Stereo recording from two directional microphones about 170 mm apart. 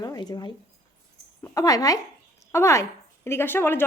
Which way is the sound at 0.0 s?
25° left (ahead or behind).